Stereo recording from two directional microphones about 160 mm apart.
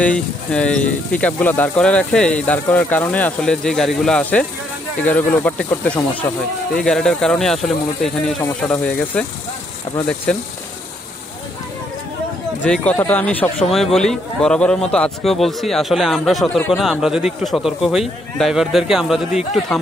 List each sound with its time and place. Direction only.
0.0 s speech: 5° left (ahead or behind)
6.2 s speech: 20° left (ahead or behind)
6.8 s a man's voice: 5° left (ahead or behind)
10.3 s a man's voice: 5° left (ahead or behind)
12.6 s a man's voice: 5° left (ahead or behind)